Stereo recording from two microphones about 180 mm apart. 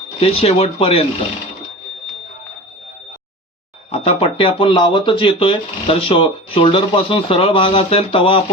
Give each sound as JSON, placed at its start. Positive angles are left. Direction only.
{"t": 0.2, "sound": "speech", "side_deg": 35}
{"t": 3.9, "sound": "speech", "side_deg": 35}